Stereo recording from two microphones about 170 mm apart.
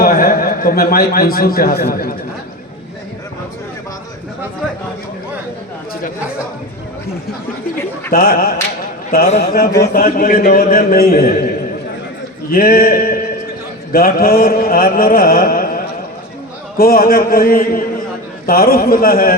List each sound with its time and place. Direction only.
0.0 s a man's voice: 60° left (ahead or behind)
8.1 s mantra: 60° left (ahead or behind)
9.0 s a man's voice: 45° left (ahead or behind)
9.4 s mantra: 60° left (ahead or behind)
12.5 s a sound: 60° left (ahead or behind)
13.9 s mantra: 60° left (ahead or behind)